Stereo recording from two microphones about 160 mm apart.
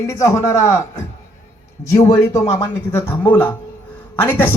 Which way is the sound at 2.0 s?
20° left (ahead or behind).